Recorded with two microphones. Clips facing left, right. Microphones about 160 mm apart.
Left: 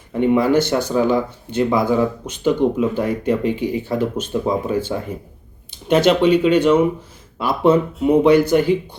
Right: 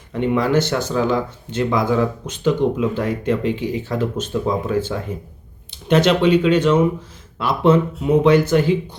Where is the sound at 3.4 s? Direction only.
50° left (ahead or behind).